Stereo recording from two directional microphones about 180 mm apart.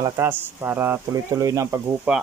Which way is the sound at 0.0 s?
15° right (ahead or behind).